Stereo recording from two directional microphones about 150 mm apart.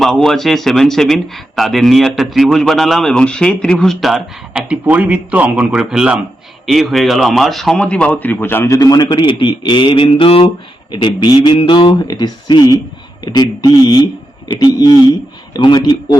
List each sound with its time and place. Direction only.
0.0 s speech: centre (ahead or behind); by 16.0 s 30° left (ahead or behind)